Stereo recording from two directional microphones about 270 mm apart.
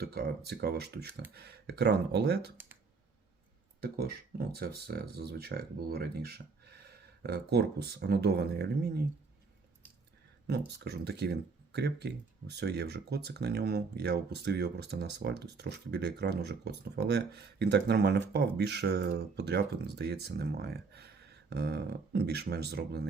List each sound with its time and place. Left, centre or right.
0.0 s speech: right
3.8 s speech: right
10.8 s speech: right